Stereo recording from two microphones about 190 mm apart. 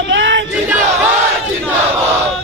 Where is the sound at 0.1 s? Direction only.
75° right (ahead or behind).